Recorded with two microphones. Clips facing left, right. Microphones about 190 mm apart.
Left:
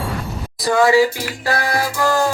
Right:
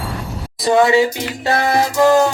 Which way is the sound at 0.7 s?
25° right (ahead or behind).